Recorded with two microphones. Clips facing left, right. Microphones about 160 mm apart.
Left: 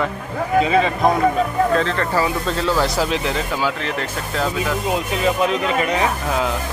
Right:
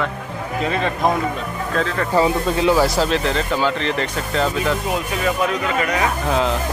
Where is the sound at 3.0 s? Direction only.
10° left (ahead or behind).